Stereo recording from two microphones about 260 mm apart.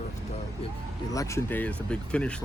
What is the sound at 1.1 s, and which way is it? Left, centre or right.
Speech, centre.